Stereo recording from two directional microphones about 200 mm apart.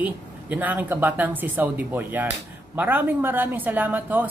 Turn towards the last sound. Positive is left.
turn(degrees=-10)  # may be behind; listen again after turning